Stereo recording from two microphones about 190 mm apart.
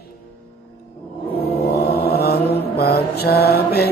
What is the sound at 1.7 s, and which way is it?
Mantra, 55° left (ahead or behind).